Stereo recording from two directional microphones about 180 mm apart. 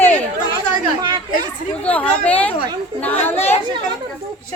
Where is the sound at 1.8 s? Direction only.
5° left (ahead or behind).